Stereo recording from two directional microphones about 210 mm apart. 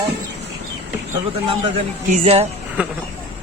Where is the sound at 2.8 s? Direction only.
5° right (ahead or behind).